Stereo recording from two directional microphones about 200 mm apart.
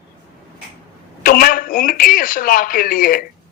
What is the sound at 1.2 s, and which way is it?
A man's voice, 45° left (ahead or behind).